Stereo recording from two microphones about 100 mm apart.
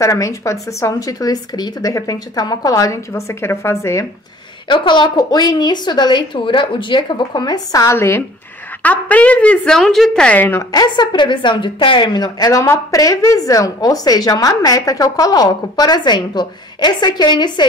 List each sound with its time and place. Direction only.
0.0 s a woman's voice: 30° left (ahead or behind)
4.6 s a woman's voice: 50° left (ahead or behind); by 8.2 s 25° left (ahead or behind)
8.8 s speech: 15° left (ahead or behind)
9.8 s speech: 5° left (ahead or behind)
10.7 s a woman's voice: 45° left (ahead or behind)